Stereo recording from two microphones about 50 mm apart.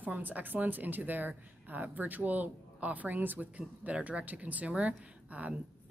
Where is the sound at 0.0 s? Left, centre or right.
Right.